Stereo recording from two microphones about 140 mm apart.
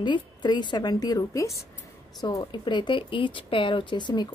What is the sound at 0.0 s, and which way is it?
Speech, 35° left (ahead or behind).